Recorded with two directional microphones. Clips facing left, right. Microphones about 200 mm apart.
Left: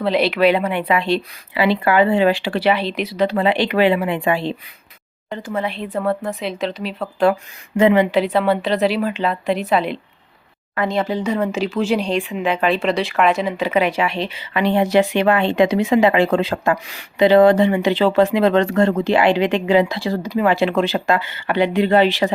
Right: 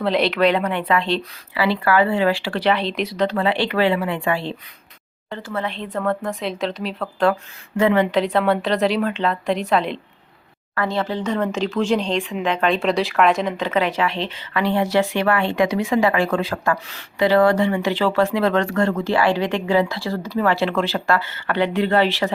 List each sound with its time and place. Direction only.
0.0 s speech: centre (ahead or behind)
3.3 s speech: 15° left (ahead or behind)
7.8 s speech: 15° left (ahead or behind)
8.0 s a woman's voice: 5° left (ahead or behind)
10.8 s speech: 15° left (ahead or behind)